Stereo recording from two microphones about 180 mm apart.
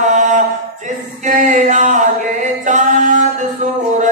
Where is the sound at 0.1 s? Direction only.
45° right (ahead or behind).